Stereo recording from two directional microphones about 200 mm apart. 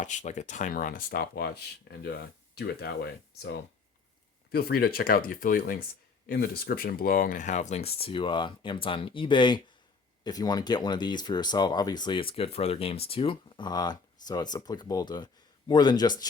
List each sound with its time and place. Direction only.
0.0 s speech: 35° left (ahead or behind); by 3.5 s 55° left (ahead or behind)
4.5 s speech: 50° left (ahead or behind); by 16.2 s 20° left (ahead or behind)